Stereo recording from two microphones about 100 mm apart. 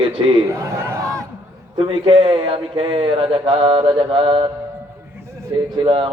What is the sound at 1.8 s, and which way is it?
Speech, 65° right (ahead or behind).